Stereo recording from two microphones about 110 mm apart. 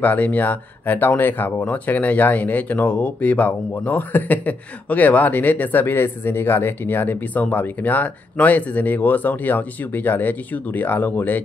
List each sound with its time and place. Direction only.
0.0 s speech: 15° left (ahead or behind)